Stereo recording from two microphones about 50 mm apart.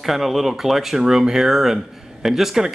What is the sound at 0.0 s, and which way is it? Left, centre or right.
Speech, centre.